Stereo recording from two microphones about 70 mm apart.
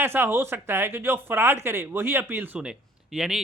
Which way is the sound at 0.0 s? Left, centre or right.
Right.